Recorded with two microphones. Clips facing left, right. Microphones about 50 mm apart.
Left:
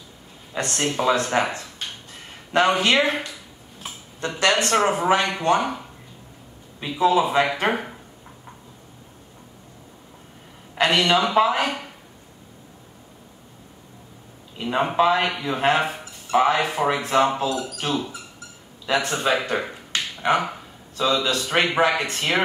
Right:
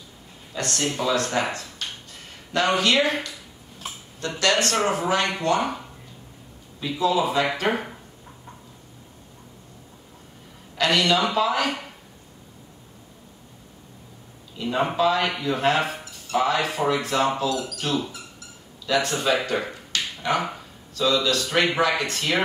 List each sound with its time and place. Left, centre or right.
0.5 s speech: left
4.4 s speech: left
5.6 s speech: centre
7.0 s speech: left
7.7 s speech: centre
10.8 s a man's voice: left
14.6 s a man's voice: left
19.5 s finger snapping: left
20.9 s speech: left